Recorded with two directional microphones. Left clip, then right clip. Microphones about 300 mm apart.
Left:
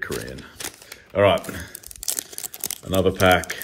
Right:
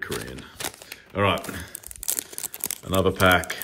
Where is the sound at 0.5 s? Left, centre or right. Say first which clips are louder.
Right 1 dB; right.